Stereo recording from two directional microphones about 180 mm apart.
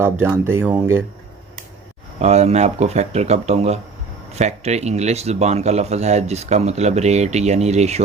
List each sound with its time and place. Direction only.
0.0 s speech: 15° right (ahead or behind)
2.1 s speech: 35° right (ahead or behind)